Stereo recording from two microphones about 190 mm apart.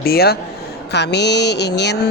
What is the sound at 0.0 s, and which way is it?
Speech, 55° left (ahead or behind).